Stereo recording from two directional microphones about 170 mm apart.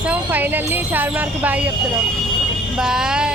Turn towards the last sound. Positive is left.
turn(degrees=-5)  # may be behind; listen again after turning